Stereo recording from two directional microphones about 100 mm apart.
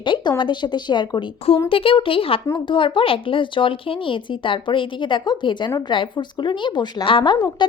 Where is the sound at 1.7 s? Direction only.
65° left (ahead or behind).